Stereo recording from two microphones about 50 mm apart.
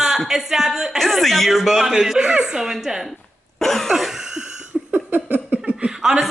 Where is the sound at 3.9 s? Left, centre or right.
Centre.